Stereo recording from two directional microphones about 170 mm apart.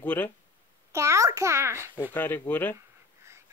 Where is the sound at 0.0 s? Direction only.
10° left (ahead or behind).